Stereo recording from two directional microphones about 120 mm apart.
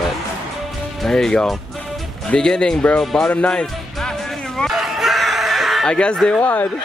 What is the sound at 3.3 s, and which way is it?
Music, 10° left (ahead or behind).